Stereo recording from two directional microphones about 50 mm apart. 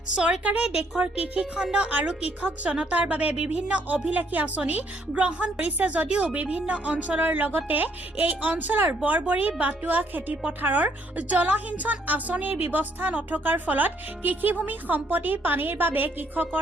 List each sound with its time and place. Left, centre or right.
0.2 s a woman's voice: right